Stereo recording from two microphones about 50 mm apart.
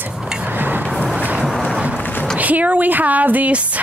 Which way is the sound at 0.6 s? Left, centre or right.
Right.